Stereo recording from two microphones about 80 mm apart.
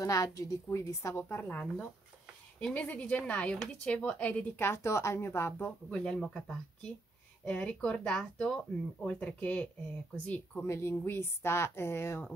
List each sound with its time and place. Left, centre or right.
0.0 s a woman's voice: left
1.1 s a woman's voice: left
4.6 s speech: left
5.9 s a woman's voice: centre
10.6 s speech: left